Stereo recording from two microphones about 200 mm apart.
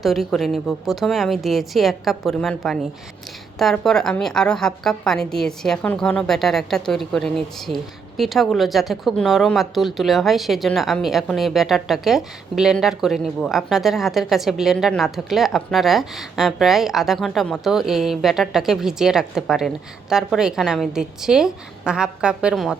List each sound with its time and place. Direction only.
0.0 s a woman's voice: centre (ahead or behind)